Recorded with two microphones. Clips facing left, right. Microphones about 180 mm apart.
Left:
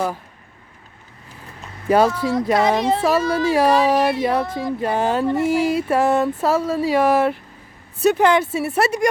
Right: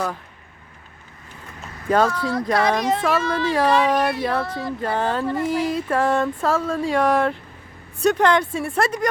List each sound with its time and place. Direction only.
1.9 s speech: 10° left (ahead or behind)
2.3 s speech: 20° left (ahead or behind)
3.4 s speech: 10° left (ahead or behind)
3.9 s speech: 25° left (ahead or behind); by 9.0 s 10° left (ahead or behind)